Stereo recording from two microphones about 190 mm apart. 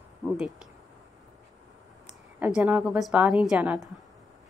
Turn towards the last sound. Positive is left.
turn(degrees=-5)  # may be behind; listen again after turning